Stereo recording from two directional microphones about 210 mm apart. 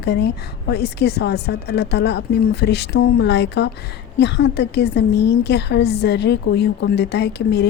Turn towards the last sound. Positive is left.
turn(degrees=55)  # may be behind; listen again after turning